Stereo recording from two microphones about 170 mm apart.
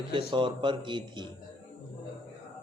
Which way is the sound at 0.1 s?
30° right (ahead or behind).